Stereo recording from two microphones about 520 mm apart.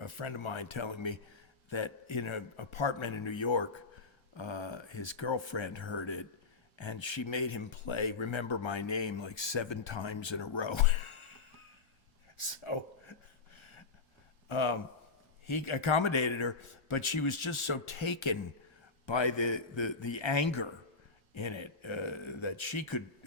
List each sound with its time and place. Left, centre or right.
0.0 s speech: left
12.4 s a sound: left
14.4 s speech: left